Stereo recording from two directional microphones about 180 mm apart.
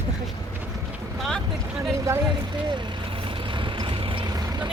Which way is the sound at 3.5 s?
25° right (ahead or behind).